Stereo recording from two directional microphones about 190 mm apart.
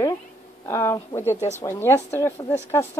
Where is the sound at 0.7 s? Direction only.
15° left (ahead or behind).